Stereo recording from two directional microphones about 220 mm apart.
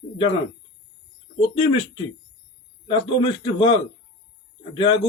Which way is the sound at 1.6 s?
20° left (ahead or behind).